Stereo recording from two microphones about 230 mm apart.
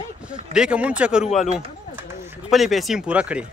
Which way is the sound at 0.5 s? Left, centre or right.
Centre.